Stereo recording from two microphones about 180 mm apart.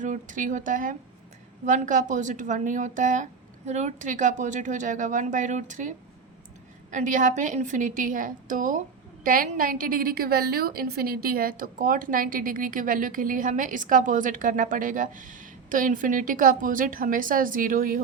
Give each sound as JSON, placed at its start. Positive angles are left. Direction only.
{"t": 0.0, "sound": "a woman's voice", "side_deg": -45}
{"t": 6.9, "sound": "a woman's voice", "side_deg": -45}